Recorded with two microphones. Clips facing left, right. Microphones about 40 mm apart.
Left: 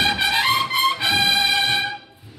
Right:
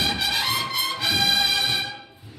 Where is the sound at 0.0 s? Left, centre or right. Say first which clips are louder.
Left 5 dB; left.